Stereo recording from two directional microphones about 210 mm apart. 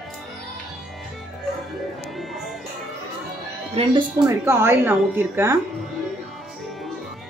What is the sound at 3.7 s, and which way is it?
Speech, 25° right (ahead or behind).